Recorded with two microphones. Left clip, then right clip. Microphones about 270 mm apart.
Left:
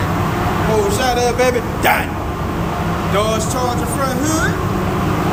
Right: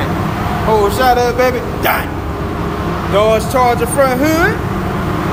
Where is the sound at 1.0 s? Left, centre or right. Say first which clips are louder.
Right 4 dB; centre.